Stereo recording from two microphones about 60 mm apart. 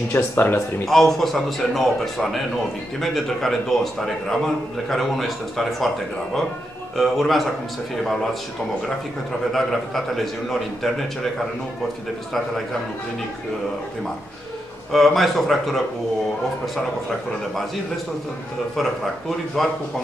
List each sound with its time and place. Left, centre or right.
0.1 s speech: left
0.8 s a man's voice: centre
7.0 s a man's voice: centre
9.5 s a man's voice: centre
14.9 s a man's voice: centre
18.8 s a man's voice: centre